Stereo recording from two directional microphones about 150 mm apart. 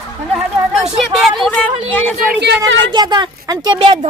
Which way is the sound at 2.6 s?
30° right (ahead or behind).